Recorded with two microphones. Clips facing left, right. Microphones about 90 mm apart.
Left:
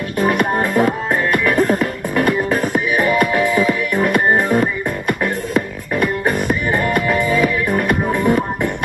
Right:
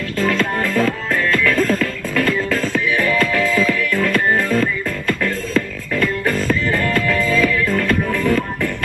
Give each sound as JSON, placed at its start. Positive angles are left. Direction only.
{"t": 0.2, "sound": "music", "side_deg": 20}